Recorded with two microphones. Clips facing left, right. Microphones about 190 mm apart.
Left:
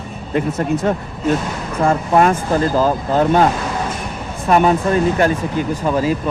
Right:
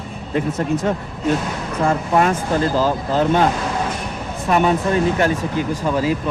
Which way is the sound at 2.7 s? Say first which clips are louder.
Left 2 dB; 50° left (ahead or behind).